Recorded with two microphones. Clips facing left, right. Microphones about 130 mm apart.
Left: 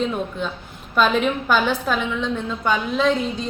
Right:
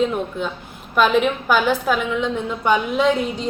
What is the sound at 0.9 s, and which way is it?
A woman's voice, 10° right (ahead or behind).